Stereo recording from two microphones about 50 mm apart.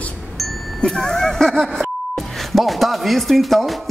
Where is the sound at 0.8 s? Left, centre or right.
Centre.